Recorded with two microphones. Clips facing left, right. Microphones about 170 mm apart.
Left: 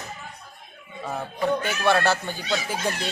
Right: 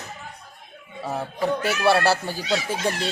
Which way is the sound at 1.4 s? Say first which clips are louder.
Right 2 dB; 35° right (ahead or behind).